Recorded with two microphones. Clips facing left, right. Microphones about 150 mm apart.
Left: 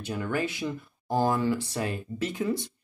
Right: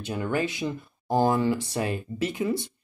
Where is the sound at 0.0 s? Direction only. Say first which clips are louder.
Right 2 dB; 20° right (ahead or behind).